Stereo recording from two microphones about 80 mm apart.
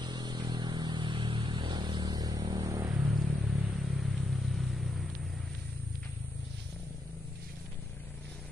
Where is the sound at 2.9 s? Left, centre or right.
Centre.